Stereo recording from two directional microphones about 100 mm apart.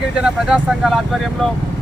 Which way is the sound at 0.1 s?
10° right (ahead or behind).